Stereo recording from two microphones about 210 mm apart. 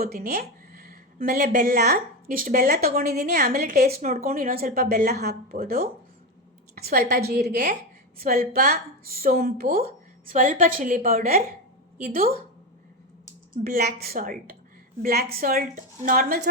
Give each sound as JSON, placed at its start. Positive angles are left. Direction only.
{"t": 0.0, "sound": "a woman's voice", "side_deg": -45}
{"t": 3.8, "sound": "a woman's voice", "side_deg": -30}
{"t": 4.3, "sound": "a woman's voice", "side_deg": -45}
{"t": 13.5, "sound": "a woman's voice", "side_deg": -45}